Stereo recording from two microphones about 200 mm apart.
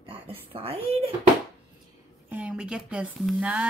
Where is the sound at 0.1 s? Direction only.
30° right (ahead or behind).